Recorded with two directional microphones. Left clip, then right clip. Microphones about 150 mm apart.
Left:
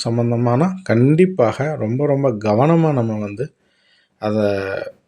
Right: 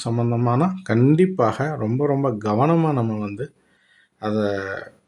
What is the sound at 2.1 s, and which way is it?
Speech, 10° left (ahead or behind).